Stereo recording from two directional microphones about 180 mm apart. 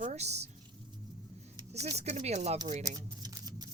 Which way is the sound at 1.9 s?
40° right (ahead or behind).